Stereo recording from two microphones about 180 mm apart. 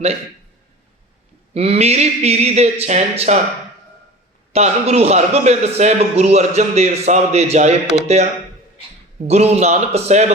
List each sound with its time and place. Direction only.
1.5 s a man's voice: 35° right (ahead or behind)
4.5 s a man's voice: 35° right (ahead or behind)